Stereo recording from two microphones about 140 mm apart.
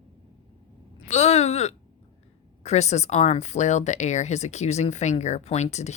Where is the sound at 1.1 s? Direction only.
50° left (ahead or behind).